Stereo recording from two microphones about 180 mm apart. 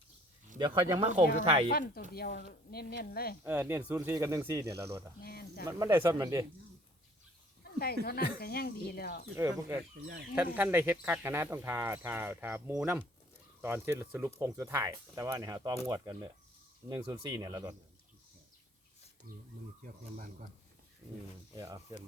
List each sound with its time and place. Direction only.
0.9 s speech: 40° right (ahead or behind)
1.7 s speech: 55° left (ahead or behind)
3.4 s speech: 10° right (ahead or behind)
5.2 s cricket: 60° left (ahead or behind)
5.6 s speech: 15° right (ahead or behind)
7.6 s a sound: 60° left (ahead or behind)
8.0 s speech: 60° left (ahead or behind)
9.3 s speech: 15° right (ahead or behind)
19.3 s speech: 55° right (ahead or behind)
21.5 s speech: 20° right (ahead or behind)